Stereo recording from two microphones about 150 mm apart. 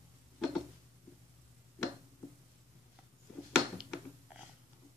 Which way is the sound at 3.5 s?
5° right (ahead or behind).